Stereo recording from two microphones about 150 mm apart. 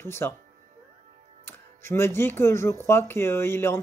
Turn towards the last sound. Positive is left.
turn(degrees=15)  # may be behind; listen again after turning